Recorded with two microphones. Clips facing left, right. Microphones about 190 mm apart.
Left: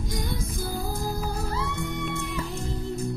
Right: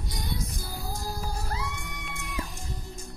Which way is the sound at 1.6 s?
60° left (ahead or behind).